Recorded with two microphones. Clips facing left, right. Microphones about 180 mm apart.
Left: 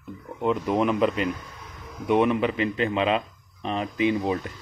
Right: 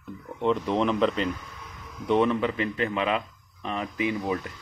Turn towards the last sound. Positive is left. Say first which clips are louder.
# left 4 dB
turn(degrees=25)  # may be behind; listen again after turning